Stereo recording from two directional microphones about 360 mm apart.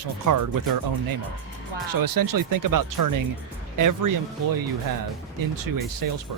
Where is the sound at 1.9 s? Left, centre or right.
Right.